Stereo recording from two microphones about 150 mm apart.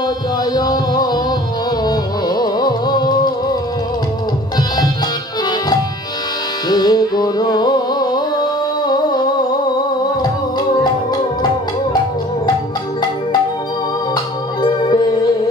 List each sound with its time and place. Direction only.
0.6 s music: 25° left (ahead or behind)
6.7 s music: 30° left (ahead or behind)
14.6 s music: 30° left (ahead or behind)